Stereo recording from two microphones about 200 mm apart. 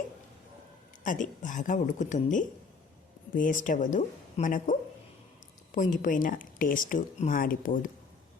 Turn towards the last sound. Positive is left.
turn(degrees=45)  # may be behind; listen again after turning